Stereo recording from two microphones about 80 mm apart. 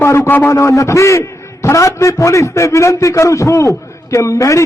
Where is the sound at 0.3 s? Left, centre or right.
Left.